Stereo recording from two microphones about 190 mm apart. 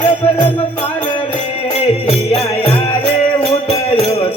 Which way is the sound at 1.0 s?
30° left (ahead or behind).